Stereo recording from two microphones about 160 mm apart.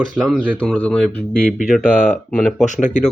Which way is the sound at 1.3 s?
60° left (ahead or behind).